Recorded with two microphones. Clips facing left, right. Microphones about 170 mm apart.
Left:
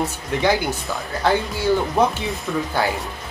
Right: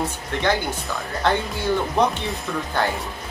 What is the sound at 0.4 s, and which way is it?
Speech, 5° left (ahead or behind).